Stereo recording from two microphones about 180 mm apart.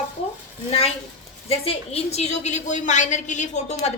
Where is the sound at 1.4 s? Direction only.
35° left (ahead or behind).